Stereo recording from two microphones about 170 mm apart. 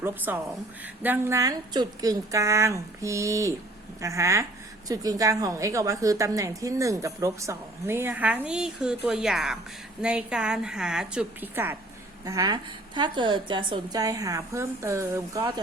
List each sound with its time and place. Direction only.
0.0 s a woman's voice: 10° right (ahead or behind)
15.4 s a woman's voice: 30° right (ahead or behind)